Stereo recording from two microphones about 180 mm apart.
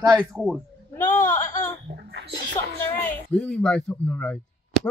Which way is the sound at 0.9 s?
15° left (ahead or behind).